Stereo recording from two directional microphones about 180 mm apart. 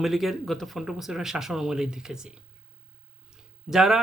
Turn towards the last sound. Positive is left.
turn(degrees=0)  # may be behind; listen again after turning